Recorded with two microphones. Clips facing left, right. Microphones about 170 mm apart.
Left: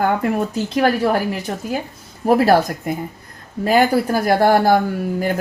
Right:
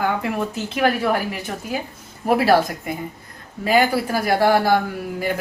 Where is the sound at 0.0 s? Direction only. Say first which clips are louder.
Left 4 dB; 45° left (ahead or behind).